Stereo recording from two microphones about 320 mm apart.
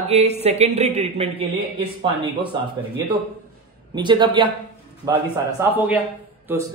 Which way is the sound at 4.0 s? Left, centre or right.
Centre.